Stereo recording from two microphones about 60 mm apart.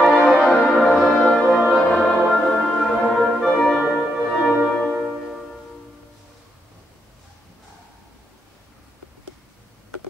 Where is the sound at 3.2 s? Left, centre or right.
Centre.